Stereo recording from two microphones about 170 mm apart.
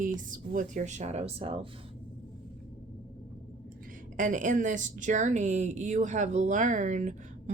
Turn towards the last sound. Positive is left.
turn(degrees=-45)  # may be behind; listen again after turning